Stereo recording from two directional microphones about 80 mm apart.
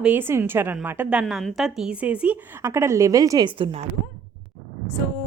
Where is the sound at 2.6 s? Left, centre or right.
Right.